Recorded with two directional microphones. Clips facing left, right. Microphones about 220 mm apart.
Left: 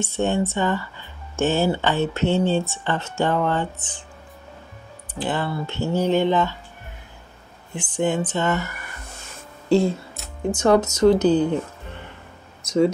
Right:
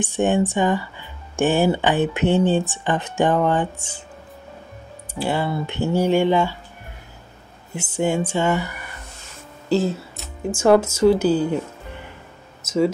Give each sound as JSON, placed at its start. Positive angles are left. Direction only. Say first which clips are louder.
{"t": 0.0, "sound": "speech", "louder": "right 3 dB", "side_deg": -15}
{"t": 5.2, "sound": "speech", "louder": "right 2 dB", "side_deg": -10}
{"t": 7.7, "sound": "speech", "louder": "right 1 dB", "side_deg": -10}
{"t": 9.7, "sound": "speech", "louder": "left 2 dB", "side_deg": 0}
{"t": 12.6, "sound": "speech", "louder": "left 1 dB", "side_deg": -5}